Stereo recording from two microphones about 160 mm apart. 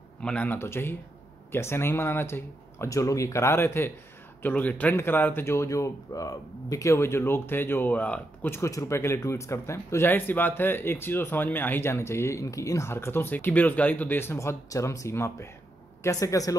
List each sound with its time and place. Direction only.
0.2 s speech: 10° left (ahead or behind)